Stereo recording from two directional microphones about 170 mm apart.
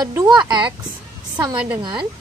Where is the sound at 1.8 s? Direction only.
30° right (ahead or behind).